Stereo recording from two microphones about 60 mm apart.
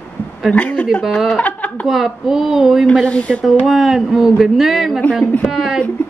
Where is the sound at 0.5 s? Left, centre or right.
Left.